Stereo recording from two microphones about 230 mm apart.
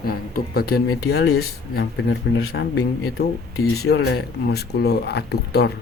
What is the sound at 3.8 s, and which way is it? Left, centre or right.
Speech, left.